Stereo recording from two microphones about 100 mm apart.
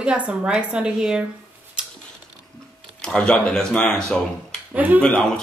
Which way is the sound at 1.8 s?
10° right (ahead or behind).